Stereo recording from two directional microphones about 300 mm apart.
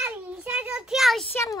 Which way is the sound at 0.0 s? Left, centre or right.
Centre.